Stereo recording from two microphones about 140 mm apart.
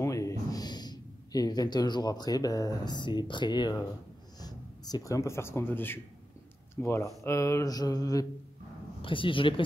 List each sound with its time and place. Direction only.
0.0 s a man's voice: 25° left (ahead or behind)
9.0 s speech: 35° left (ahead or behind)